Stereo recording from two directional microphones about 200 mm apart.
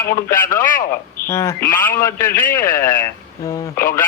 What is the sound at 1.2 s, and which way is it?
Speech, 15° left (ahead or behind).